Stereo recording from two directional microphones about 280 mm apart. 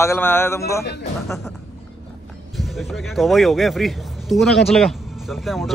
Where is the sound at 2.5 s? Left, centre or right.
Centre.